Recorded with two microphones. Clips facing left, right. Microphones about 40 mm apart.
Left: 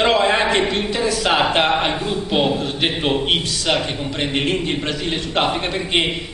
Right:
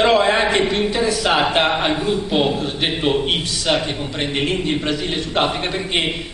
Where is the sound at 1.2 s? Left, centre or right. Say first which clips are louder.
Left 1 dB; centre.